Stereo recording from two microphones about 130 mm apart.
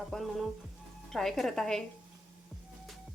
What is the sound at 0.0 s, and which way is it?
Speech, centre (ahead or behind).